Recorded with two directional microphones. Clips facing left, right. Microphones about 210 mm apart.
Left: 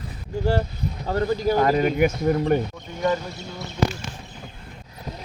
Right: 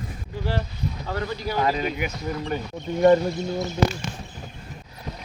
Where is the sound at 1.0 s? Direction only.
40° left (ahead or behind).